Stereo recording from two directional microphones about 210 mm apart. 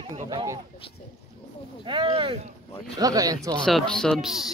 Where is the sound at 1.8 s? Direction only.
20° right (ahead or behind).